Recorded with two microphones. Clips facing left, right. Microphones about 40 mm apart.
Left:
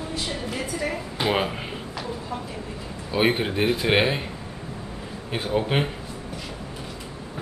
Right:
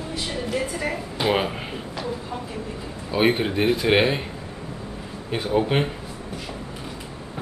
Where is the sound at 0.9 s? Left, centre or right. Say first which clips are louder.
Right 2 dB; centre.